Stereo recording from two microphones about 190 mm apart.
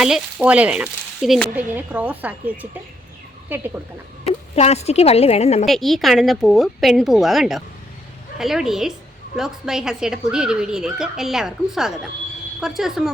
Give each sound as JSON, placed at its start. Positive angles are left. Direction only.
{"t": 0.0, "sound": "speech", "side_deg": -5}
{"t": 4.3, "sound": "speech", "side_deg": 35}
{"t": 5.6, "sound": "speech", "side_deg": 0}